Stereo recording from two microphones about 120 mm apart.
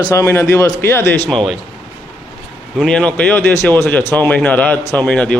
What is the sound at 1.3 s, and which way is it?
Speech, 5° left (ahead or behind).